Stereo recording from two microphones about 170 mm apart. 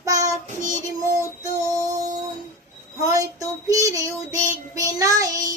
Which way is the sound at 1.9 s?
20° right (ahead or behind).